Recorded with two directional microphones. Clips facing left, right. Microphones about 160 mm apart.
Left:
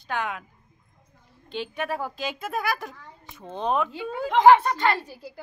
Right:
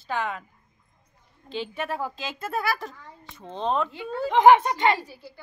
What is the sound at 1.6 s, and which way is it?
A child's voice, centre (ahead or behind).